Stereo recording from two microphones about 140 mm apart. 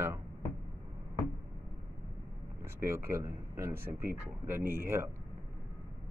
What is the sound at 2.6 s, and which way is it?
Speech, 20° right (ahead or behind).